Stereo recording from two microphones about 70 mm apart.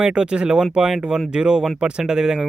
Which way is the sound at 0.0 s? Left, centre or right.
Centre.